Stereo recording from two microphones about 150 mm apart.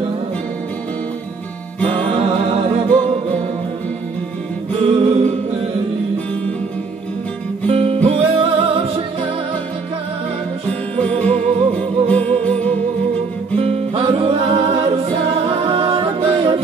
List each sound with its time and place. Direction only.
2.0 s music: 40° right (ahead or behind)
4.9 s music: 40° right (ahead or behind)
7.6 s music: 40° right (ahead or behind)
11.0 s music: 10° left (ahead or behind)
13.6 s music: 40° right (ahead or behind)